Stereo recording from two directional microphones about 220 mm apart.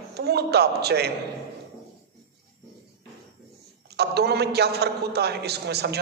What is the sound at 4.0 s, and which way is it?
A man's voice, 50° right (ahead or behind).